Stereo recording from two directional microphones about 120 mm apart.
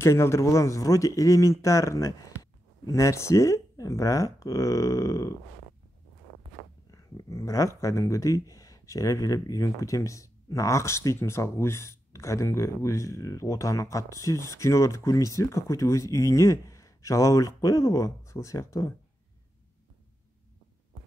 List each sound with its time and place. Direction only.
0.0 s speech: 20° left (ahead or behind)
6.9 s speech: 30° left (ahead or behind)